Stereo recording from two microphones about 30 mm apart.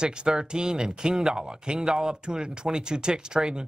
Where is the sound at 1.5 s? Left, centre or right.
Right.